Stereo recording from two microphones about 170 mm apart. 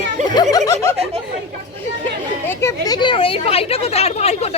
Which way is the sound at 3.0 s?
30° left (ahead or behind).